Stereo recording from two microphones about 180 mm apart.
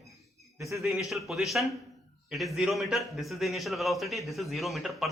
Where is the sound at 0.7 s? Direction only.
Centre (ahead or behind).